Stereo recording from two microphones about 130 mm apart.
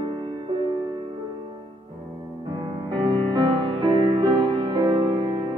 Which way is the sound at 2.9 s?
35° right (ahead or behind).